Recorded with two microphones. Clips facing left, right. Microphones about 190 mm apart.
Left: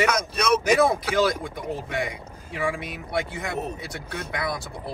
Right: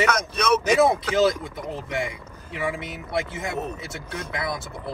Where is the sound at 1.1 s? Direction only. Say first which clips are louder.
Right 2 dB; 25° right (ahead or behind).